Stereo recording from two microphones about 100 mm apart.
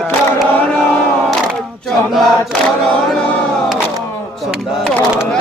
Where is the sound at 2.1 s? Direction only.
Centre (ahead or behind).